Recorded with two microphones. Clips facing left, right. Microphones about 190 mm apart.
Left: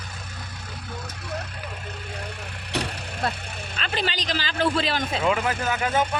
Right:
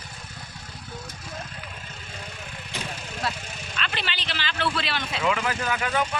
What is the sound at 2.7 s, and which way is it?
Vehicle, 60° left (ahead or behind).